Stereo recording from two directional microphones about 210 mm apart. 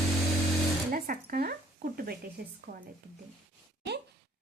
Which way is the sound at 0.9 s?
40° right (ahead or behind).